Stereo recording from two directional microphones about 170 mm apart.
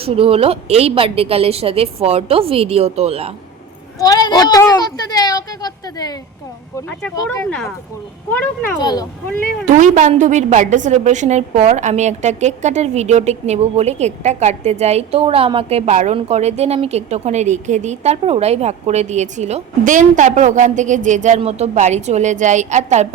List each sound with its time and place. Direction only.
0.0 s a woman's voice: 35° right (ahead or behind)
3.9 s speech: 20° left (ahead or behind)
8.3 s a child's voice: 10° left (ahead or behind)
8.8 s speech: 25° left (ahead or behind)
9.7 s a woman's voice: 45° right (ahead or behind)